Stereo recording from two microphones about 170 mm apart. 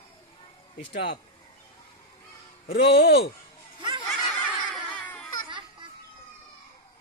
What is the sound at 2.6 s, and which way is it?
Speech, 80° left.